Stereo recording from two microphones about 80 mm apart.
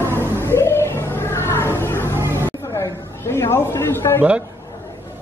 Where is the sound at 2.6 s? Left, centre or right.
Left.